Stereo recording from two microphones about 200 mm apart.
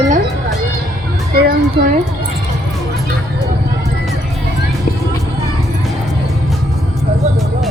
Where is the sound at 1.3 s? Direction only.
50° right (ahead or behind).